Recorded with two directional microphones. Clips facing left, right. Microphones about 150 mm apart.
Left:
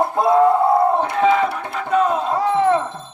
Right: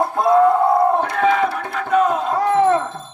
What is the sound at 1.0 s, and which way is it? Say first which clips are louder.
Battle cry: left 1 dB; 25° left (ahead or behind).